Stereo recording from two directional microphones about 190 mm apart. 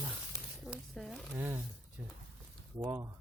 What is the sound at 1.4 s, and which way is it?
Speech, 10° right (ahead or behind).